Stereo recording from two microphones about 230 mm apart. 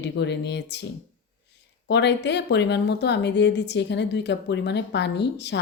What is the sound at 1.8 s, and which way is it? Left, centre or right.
Speech, left.